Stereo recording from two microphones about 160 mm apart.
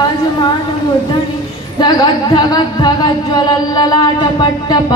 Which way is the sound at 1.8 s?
25° left (ahead or behind).